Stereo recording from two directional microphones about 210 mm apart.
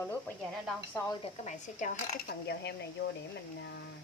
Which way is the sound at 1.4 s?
35° left (ahead or behind).